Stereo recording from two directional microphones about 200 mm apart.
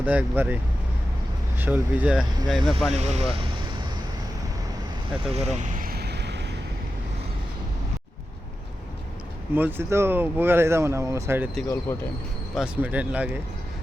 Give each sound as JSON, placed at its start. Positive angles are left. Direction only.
{"t": 0.0, "sound": "speech", "side_deg": -10}
{"t": 2.9, "sound": "speech", "side_deg": -35}
{"t": 5.3, "sound": "vehicle", "side_deg": -35}
{"t": 9.6, "sound": "speech", "side_deg": -10}
{"t": 11.9, "sound": "speech", "side_deg": 10}
{"t": 12.5, "sound": "speech", "side_deg": -5}